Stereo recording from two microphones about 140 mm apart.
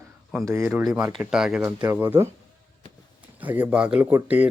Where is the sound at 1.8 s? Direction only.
15° right (ahead or behind).